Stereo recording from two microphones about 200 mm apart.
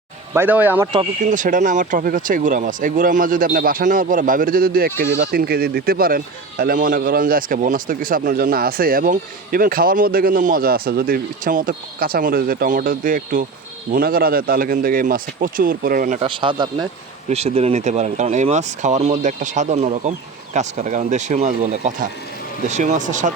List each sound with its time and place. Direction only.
0.3 s speech: 10° right (ahead or behind)
0.9 s speech: 40° right (ahead or behind)
16.2 s a man's voice: 25° right (ahead or behind)